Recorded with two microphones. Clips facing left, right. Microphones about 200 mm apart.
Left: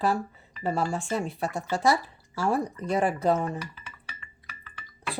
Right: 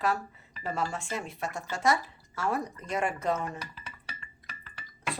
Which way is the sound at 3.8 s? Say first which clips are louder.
Right 1 dB; 35° right (ahead or behind).